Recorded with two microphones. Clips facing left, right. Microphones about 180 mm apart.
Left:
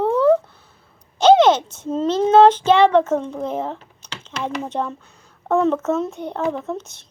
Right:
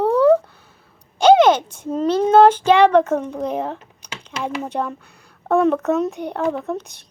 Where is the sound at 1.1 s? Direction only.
25° left (ahead or behind).